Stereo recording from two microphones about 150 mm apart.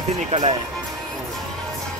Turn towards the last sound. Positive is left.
turn(degrees=-50)  # may be behind; listen again after turning